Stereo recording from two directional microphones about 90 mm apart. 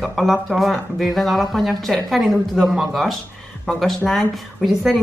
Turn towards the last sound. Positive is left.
turn(degrees=0)  # may be behind; listen again after turning